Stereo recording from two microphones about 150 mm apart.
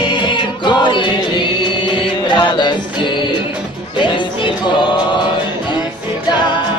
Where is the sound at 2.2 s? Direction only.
30° left (ahead or behind).